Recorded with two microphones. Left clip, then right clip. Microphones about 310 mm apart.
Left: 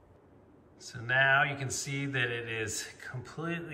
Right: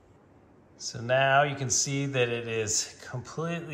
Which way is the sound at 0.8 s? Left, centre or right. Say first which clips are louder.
Right 2 dB; centre.